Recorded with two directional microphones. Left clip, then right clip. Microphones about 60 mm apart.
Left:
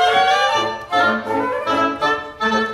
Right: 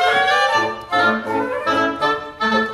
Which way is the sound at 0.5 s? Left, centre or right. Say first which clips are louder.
Even; centre.